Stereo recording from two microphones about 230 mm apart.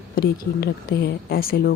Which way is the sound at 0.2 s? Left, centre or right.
Left.